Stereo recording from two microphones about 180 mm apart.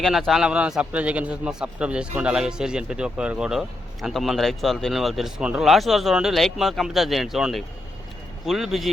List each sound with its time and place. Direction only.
0.0 s a man's voice: centre (ahead or behind)